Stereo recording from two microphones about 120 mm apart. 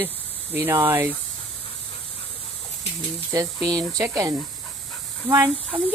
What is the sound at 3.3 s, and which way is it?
Speech, 30° right (ahead or behind).